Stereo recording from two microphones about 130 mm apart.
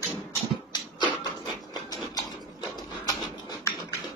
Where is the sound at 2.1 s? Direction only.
30° left (ahead or behind).